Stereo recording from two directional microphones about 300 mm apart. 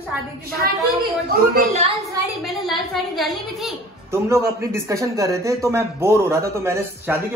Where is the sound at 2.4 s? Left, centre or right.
Centre.